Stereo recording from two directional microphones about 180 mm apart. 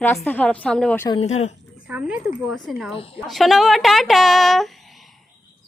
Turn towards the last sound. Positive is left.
turn(degrees=0)  # may be behind; listen again after turning